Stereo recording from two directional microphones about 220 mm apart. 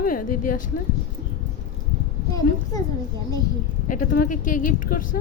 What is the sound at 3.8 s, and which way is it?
A woman's voice, 35° left (ahead or behind).